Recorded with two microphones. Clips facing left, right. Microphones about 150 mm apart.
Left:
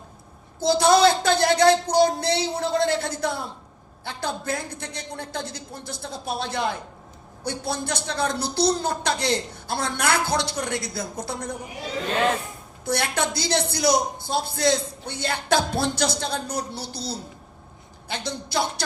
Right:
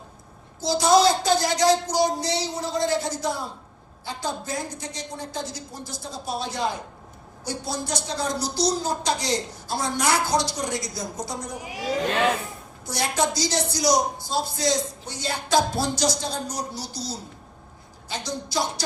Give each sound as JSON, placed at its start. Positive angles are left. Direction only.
{"t": 0.6, "sound": "a woman's voice", "side_deg": 60}
{"t": 11.6, "sound": "speech", "side_deg": -90}
{"t": 12.8, "sound": "a woman's voice", "side_deg": 60}
{"t": 18.1, "sound": "a woman's voice", "side_deg": 60}